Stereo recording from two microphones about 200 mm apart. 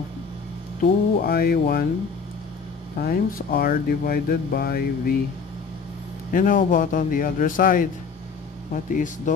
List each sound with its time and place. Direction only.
0.8 s speech: 50° left (ahead or behind)
3.0 s speech: 45° left (ahead or behind)
6.3 s speech: 40° left (ahead or behind)